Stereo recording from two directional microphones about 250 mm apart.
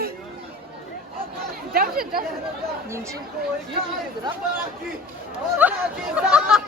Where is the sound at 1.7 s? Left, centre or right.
Right.